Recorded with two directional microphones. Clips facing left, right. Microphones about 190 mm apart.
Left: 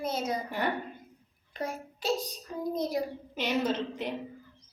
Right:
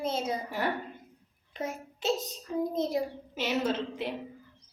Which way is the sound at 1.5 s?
20° right (ahead or behind).